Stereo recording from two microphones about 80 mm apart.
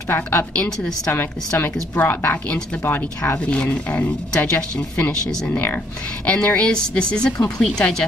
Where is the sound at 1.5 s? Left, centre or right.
Left.